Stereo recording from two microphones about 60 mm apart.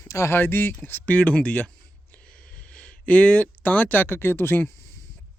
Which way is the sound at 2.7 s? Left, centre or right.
Left.